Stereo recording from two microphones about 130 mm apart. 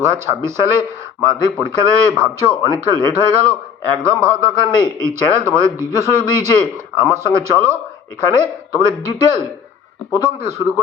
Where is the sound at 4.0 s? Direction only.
20° right (ahead or behind).